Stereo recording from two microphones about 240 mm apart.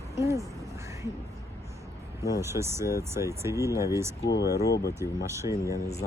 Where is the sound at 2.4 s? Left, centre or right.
Centre.